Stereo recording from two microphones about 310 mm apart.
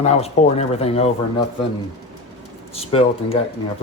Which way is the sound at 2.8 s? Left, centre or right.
Centre.